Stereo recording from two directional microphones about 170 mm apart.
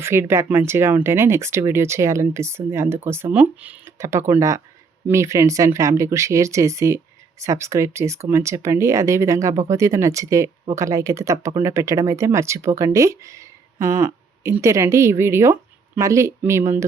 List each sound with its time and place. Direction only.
0.0 s speech: 15° right (ahead or behind)